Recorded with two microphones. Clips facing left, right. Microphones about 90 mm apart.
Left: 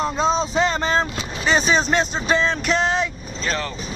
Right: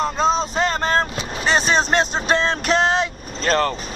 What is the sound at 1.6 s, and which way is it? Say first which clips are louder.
Speech: right 1 dB; 55° right (ahead or behind).